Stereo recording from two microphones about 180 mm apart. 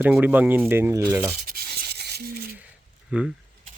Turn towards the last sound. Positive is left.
turn(degrees=-5)  # may be behind; listen again after turning